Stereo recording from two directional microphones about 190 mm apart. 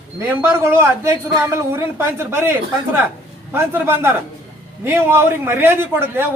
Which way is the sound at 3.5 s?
15° right (ahead or behind).